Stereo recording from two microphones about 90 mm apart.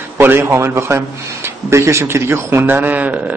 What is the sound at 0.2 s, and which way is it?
A man's voice, 25° right (ahead or behind).